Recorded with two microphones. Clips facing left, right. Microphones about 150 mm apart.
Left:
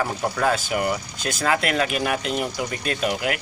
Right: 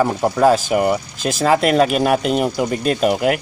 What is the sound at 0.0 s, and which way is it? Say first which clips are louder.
Speech: right 8 dB; 35° right (ahead or behind).